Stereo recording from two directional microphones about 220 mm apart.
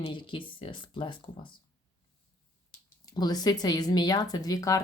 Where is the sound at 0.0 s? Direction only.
20° left (ahead or behind).